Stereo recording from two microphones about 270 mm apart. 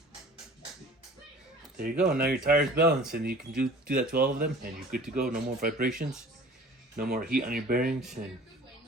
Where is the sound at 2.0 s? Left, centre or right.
Right.